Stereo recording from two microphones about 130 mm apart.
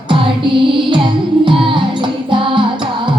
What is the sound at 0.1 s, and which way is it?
Music, 40° right (ahead or behind).